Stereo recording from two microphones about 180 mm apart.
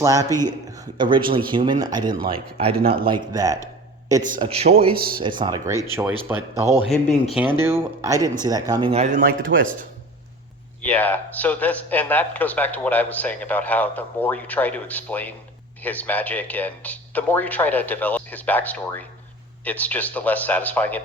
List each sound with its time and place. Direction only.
0.0 s speech: 20° right (ahead or behind)
4.4 s a man's voice: 30° right (ahead or behind)
4.9 s speech: 55° right (ahead or behind)
5.2 s a man's voice: 25° right (ahead or behind)
6.8 s speech: centre (ahead or behind)
7.6 s speech: 15° right (ahead or behind)
8.9 s a man's voice: 35° right (ahead or behind)
9.2 s speech: 90° right
10.8 s speech: 10° left (ahead or behind)